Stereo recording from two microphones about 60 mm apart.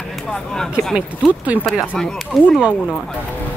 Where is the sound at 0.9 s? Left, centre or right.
Right.